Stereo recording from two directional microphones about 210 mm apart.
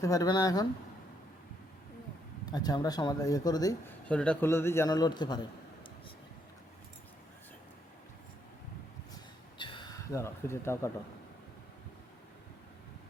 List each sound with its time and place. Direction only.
0.0 s a man's voice: 15° left (ahead or behind)
2.5 s a man's voice: 20° left (ahead or behind)
4.1 s a man's voice: 5° left (ahead or behind)
9.6 s speech: 25° left (ahead or behind)